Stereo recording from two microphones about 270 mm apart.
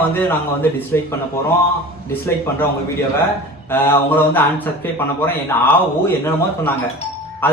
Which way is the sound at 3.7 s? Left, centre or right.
Centre.